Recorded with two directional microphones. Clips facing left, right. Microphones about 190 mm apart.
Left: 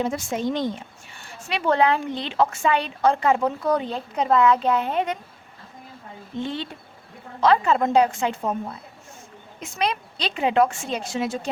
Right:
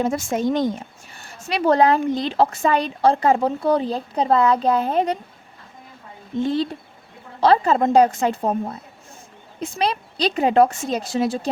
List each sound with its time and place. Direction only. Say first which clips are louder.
0.0 s a woman's voice: right 4 dB; 45° right (ahead or behind)
6.4 s a woman's voice: right 8 dB; 40° right (ahead or behind)